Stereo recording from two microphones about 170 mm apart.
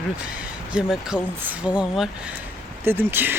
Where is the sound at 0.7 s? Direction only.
5° right (ahead or behind).